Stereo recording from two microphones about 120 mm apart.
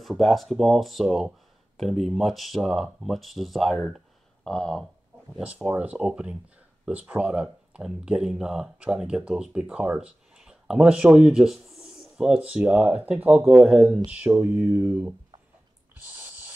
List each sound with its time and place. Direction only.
0.0 s speech: centre (ahead or behind)
5.4 s speech: 10° right (ahead or behind)
16.2 s snort: 15° right (ahead or behind)